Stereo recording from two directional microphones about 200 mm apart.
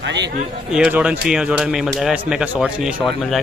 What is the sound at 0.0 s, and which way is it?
Speech, 60° right (ahead or behind).